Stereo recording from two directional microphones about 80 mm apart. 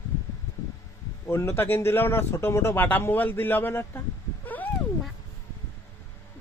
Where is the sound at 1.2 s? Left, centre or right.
Left.